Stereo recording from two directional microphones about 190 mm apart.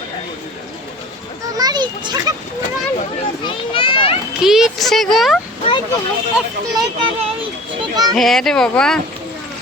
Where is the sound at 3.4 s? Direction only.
25° left (ahead or behind).